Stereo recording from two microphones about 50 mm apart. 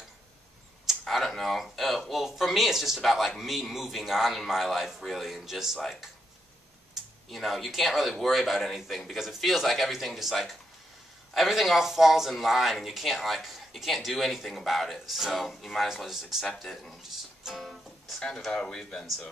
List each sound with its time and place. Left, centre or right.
1.0 s a man's voice: centre
7.2 s a man's voice: centre
16.1 s speech: centre
16.5 s speech: centre
17.1 s music: centre
18.2 s speech: centre